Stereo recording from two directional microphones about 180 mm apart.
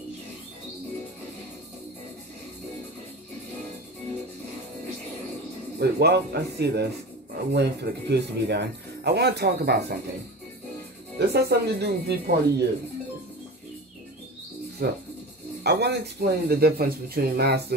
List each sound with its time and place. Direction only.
5.8 s speech: 65° right (ahead or behind)
11.1 s speech: 65° right (ahead or behind)
14.8 s speech: 60° right (ahead or behind)